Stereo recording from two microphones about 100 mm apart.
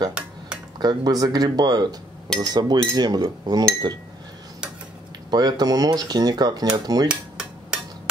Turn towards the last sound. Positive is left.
turn(degrees=-10)  # may be behind; listen again after turning